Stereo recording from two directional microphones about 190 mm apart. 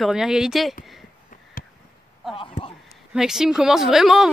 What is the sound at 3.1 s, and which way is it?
Speech, 5° right (ahead or behind).